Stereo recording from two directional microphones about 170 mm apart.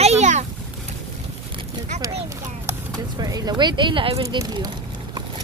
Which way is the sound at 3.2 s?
25° right (ahead or behind).